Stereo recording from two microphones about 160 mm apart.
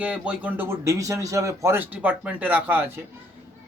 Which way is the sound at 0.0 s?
10° right (ahead or behind).